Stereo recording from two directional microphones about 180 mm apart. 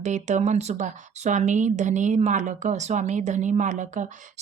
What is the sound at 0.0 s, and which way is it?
Speech, 40° right (ahead or behind).